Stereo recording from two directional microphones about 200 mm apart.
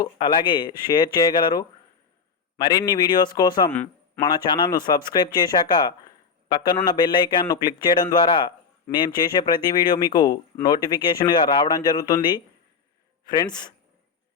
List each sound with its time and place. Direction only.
0.0 s a man's voice: 20° left (ahead or behind)
3.7 s a sound: 10° left (ahead or behind)
4.2 s a man's voice: 20° left (ahead or behind)